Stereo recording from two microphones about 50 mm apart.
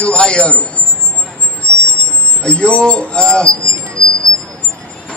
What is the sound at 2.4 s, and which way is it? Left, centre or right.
Speech, left.